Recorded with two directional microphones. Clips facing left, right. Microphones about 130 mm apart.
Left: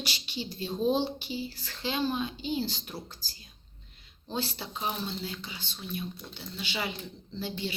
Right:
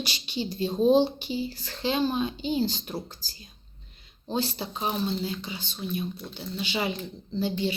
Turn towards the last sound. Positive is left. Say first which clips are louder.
# right 7 dB
turn(degrees=-20)  # may be behind; listen again after turning